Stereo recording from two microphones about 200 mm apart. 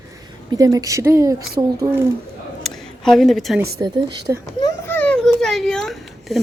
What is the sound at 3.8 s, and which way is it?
Speech, 15° right (ahead or behind).